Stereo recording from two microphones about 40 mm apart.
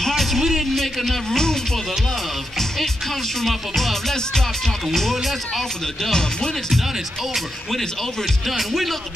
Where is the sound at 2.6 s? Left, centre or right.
Centre.